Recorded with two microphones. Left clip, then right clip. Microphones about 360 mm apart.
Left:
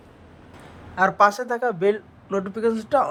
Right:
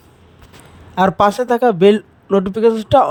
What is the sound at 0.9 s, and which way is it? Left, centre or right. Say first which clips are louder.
Speech: right 4 dB; right.